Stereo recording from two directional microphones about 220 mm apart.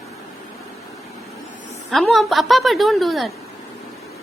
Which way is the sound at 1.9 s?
Centre (ahead or behind).